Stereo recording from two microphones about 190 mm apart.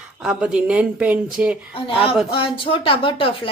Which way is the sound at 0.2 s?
5° right (ahead or behind).